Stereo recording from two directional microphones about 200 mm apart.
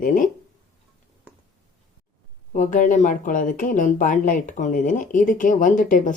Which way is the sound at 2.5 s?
40° left (ahead or behind).